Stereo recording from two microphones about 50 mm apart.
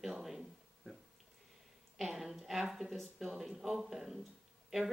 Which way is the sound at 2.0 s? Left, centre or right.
Centre.